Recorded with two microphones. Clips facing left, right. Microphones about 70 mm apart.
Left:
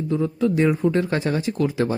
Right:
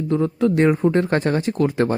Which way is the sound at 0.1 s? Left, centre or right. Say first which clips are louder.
Right 3 dB; right.